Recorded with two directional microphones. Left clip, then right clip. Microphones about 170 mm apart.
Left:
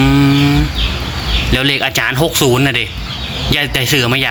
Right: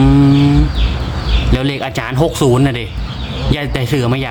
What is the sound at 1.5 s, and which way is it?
Speech, 10° right (ahead or behind).